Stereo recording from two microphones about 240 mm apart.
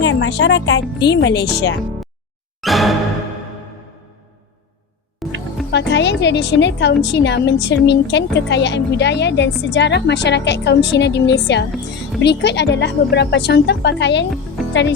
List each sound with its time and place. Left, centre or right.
0.0 s a woman's voice: left
2.6 s music: centre
5.2 s music: centre
5.7 s a woman's voice: left